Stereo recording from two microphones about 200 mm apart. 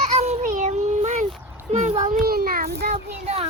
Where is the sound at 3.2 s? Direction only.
30° right (ahead or behind).